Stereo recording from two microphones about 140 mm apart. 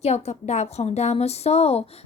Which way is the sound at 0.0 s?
50° left (ahead or behind).